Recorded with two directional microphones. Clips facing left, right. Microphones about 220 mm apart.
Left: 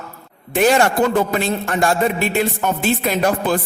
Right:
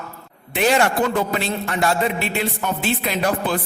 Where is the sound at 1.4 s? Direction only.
45° left (ahead or behind).